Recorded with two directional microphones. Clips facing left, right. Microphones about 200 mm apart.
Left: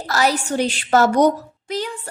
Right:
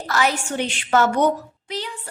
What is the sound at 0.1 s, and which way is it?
A woman's voice, 40° left (ahead or behind).